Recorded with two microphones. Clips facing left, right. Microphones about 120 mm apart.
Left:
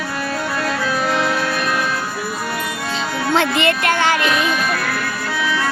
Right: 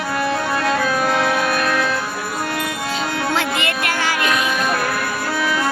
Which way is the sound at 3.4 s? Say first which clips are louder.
Left 4 dB; 30° left (ahead or behind).